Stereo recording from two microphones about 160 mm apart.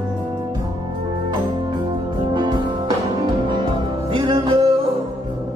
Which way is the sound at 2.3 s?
30° right (ahead or behind).